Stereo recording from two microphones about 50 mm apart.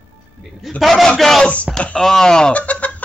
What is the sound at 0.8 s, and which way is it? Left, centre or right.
Speech, centre.